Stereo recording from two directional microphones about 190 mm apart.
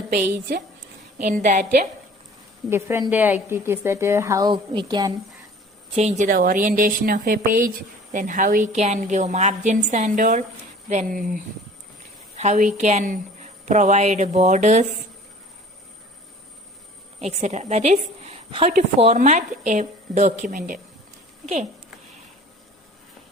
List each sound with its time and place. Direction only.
0.1 s a woman's voice: 55° right (ahead or behind)
1.3 s speech: 40° right (ahead or behind)
2.6 s a woman's voice: 15° right (ahead or behind)
6.0 s a woman's voice: 40° right (ahead or behind)
12.4 s a woman's voice: 40° right (ahead or behind)
17.2 s a woman's voice: 35° right (ahead or behind)